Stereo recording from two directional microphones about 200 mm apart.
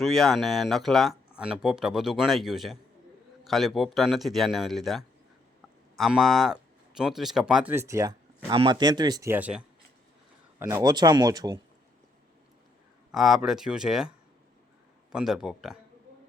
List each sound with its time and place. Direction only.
0.0 s speech: centre (ahead or behind); by 11.6 s 20° right (ahead or behind)
13.1 s speech: centre (ahead or behind)
15.1 s speech: centre (ahead or behind)